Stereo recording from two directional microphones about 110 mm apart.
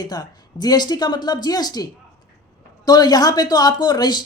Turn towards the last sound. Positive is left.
turn(degrees=40)  # may be behind; listen again after turning